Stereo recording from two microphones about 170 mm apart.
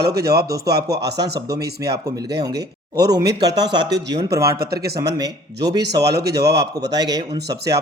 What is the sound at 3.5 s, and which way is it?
Speech, 90° right.